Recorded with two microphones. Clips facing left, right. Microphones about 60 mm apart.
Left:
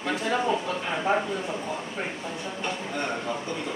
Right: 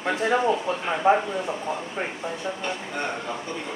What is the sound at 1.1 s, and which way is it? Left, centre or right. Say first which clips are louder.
Speech: right 6 dB; right.